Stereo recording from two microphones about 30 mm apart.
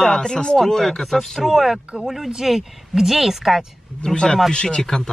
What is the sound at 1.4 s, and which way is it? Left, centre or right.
Speech, centre.